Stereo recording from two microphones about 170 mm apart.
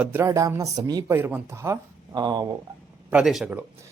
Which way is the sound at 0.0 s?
10° right (ahead or behind).